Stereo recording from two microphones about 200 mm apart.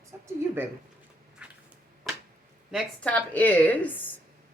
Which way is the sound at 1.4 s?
5° right (ahead or behind).